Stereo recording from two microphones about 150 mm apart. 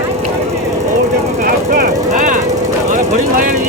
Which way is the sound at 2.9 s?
60° right (ahead or behind).